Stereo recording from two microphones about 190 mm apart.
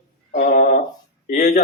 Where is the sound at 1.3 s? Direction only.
40° left (ahead or behind).